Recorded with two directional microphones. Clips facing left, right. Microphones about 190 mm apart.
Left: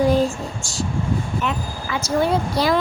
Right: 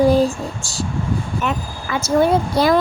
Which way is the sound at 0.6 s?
35° right (ahead or behind).